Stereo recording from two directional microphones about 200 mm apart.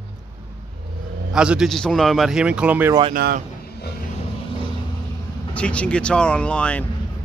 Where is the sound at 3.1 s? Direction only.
45° right (ahead or behind).